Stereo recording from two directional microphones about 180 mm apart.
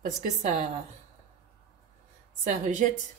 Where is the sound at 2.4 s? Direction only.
45° right (ahead or behind).